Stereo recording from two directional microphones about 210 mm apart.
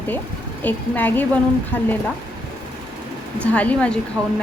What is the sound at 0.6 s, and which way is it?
A woman's voice, 10° left (ahead or behind).